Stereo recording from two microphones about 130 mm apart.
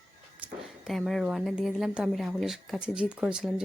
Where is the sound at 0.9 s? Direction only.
Centre (ahead or behind).